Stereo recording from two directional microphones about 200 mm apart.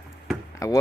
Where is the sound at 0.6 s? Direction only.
15° left (ahead or behind).